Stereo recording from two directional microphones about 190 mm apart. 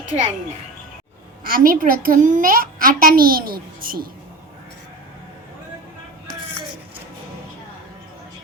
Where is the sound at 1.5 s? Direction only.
50° right (ahead or behind).